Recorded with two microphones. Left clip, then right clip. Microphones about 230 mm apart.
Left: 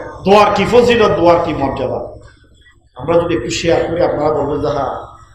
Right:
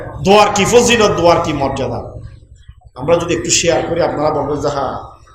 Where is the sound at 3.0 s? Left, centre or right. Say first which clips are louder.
Even; right.